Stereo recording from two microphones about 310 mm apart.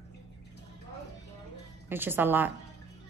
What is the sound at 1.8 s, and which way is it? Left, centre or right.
Speech, centre.